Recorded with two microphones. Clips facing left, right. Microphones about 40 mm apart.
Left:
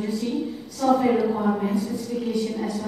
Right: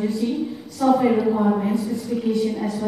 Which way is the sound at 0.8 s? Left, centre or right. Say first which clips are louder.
Right 2 dB; centre.